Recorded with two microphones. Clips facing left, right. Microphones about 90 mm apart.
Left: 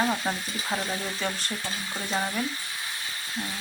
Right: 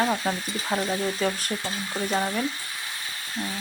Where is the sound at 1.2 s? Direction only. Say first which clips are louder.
Right 5 dB; 5° right (ahead or behind).